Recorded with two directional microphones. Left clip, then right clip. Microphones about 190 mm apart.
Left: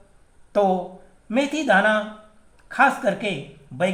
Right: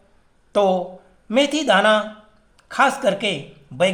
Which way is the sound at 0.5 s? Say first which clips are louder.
Right 2 dB; 25° right (ahead or behind).